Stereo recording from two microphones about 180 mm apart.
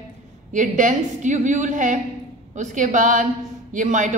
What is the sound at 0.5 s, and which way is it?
A woman's voice, 45° right (ahead or behind).